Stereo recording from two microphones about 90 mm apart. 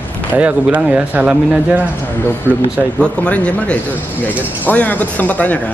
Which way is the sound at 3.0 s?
15° left (ahead or behind).